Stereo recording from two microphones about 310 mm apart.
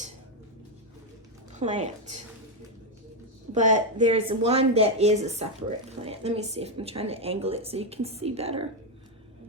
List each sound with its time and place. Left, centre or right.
1.5 s speech: right
3.5 s speech: right